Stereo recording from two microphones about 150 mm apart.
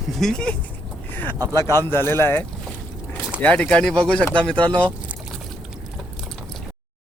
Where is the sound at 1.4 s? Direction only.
25° right (ahead or behind).